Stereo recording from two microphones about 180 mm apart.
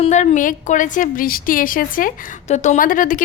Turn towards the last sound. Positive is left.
turn(degrees=50)  # may be behind; listen again after turning